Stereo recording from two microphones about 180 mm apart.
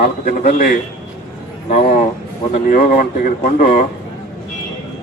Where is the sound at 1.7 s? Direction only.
35° left (ahead or behind).